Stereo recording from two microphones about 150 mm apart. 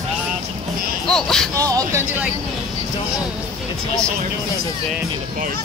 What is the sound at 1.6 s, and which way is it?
Speech, 20° right (ahead or behind).